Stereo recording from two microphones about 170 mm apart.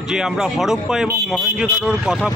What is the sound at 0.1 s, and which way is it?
Speech, 5° right (ahead or behind).